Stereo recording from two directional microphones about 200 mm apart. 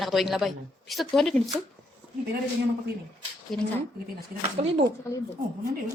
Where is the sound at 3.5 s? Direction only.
5° left (ahead or behind).